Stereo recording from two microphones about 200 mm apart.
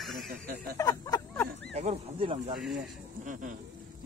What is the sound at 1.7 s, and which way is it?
Speech, 30° right (ahead or behind).